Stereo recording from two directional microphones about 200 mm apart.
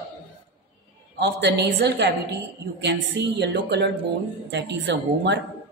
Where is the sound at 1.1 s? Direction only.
55° right (ahead or behind).